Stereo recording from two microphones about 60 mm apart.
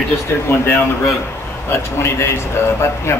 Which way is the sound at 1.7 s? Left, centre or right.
Left.